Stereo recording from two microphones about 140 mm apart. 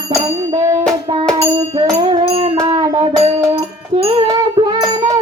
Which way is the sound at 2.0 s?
35° right (ahead or behind).